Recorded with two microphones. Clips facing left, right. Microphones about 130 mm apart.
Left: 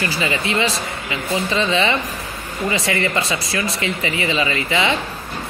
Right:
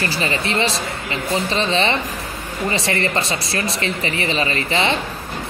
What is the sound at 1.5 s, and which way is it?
Speech, 30° right (ahead or behind).